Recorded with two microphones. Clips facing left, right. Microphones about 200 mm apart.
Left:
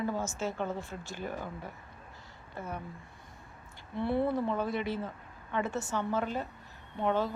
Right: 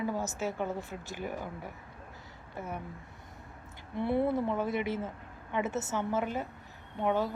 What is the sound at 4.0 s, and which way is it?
A woman's voice, 15° right (ahead or behind).